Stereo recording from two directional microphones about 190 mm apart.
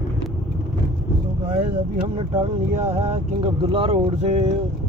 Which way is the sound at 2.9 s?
30° right (ahead or behind).